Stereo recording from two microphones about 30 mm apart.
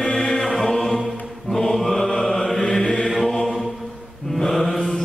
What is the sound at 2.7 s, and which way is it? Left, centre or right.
Mantra, left.